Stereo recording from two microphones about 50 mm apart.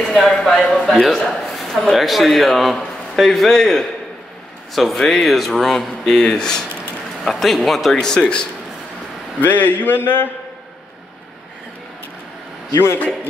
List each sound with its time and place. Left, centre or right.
0.3 s a man's voice: centre
4.9 s a man's voice: centre
8.0 s speech: centre
9.4 s a man's voice: left
12.7 s a man's voice: left